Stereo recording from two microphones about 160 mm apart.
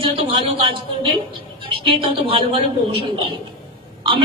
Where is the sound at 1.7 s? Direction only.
35° right (ahead or behind).